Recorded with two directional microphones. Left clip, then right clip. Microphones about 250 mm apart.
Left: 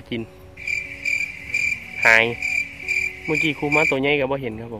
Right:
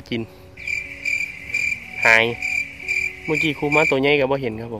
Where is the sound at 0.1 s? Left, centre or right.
Centre.